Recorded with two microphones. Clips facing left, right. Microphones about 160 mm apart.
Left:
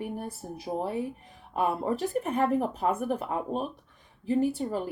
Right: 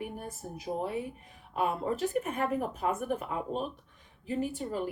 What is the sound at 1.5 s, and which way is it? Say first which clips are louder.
Speech: left 3 dB; 40° left (ahead or behind).